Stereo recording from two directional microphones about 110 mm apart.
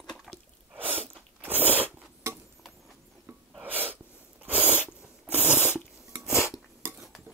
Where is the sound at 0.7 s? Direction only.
15° right (ahead or behind).